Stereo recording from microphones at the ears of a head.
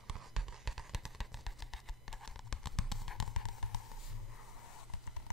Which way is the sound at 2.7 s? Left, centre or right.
Left.